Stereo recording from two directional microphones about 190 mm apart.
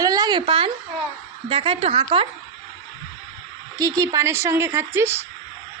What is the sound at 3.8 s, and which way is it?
A woman's voice, 20° right (ahead or behind).